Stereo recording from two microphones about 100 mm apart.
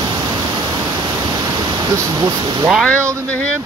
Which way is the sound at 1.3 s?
40° right (ahead or behind).